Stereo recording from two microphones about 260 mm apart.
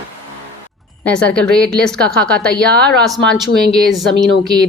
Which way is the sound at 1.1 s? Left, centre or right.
Centre.